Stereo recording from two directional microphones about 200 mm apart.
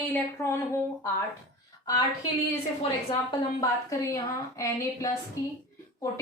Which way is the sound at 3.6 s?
15° left (ahead or behind).